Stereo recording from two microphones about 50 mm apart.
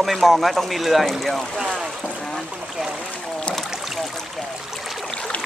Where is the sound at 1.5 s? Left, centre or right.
Centre.